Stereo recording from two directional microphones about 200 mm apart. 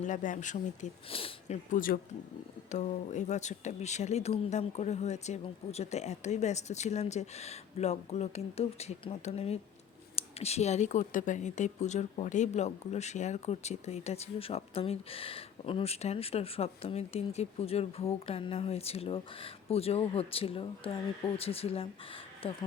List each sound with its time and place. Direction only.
0.0 s speech: 40° left (ahead or behind)
1.7 s speech: 45° left (ahead or behind); by 22.5 s 30° left (ahead or behind)